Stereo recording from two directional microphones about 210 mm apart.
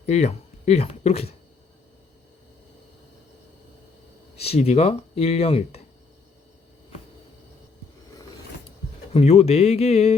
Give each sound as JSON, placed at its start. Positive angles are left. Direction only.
{"t": 0.0, "sound": "speech", "side_deg": 30}
{"t": 4.4, "sound": "speech", "side_deg": 30}
{"t": 9.1, "sound": "speech", "side_deg": 30}